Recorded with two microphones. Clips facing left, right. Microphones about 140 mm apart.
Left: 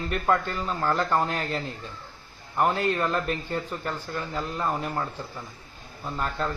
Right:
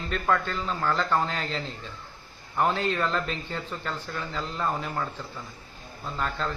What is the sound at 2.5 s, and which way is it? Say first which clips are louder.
Speech: left 1 dB; 5° left (ahead or behind).